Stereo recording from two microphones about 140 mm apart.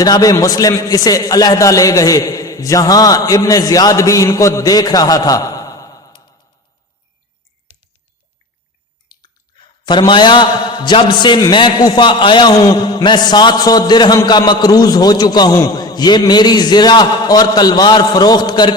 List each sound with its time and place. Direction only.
0.0 s a man's voice: 25° left (ahead or behind)
9.8 s a man's voice: 30° left (ahead or behind)